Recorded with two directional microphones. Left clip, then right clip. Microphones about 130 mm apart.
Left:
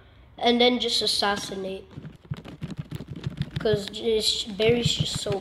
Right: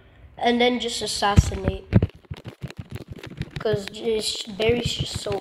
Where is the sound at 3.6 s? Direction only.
10° left (ahead or behind).